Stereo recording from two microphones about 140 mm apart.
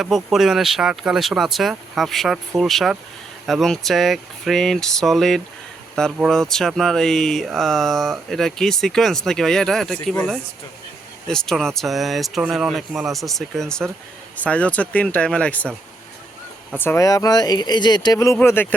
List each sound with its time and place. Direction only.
0.0 s speech: centre (ahead or behind)
16.7 s speech: 15° left (ahead or behind)
18.3 s speech: 15° left (ahead or behind)